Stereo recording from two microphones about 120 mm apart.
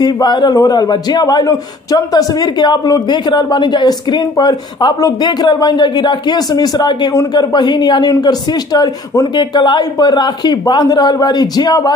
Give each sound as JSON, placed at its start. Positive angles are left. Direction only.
{"t": 0.0, "sound": "speech", "side_deg": 35}